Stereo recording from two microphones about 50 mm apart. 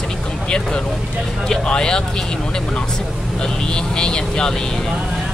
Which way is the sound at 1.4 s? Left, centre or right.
Centre.